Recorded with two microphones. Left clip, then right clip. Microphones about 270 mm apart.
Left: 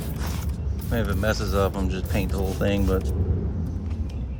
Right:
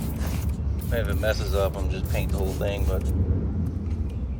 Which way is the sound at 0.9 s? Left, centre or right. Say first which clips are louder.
Even; left.